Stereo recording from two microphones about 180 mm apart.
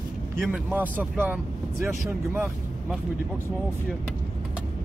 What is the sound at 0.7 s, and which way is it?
Speech, 10° right (ahead or behind).